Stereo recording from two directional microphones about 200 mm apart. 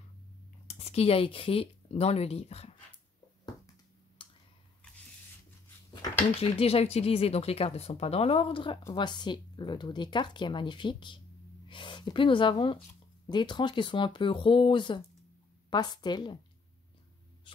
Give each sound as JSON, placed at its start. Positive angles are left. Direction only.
{"t": 0.7, "sound": "speech", "side_deg": 30}
{"t": 4.2, "sound": "a sound", "side_deg": 25}
{"t": 6.6, "sound": "speech", "side_deg": 30}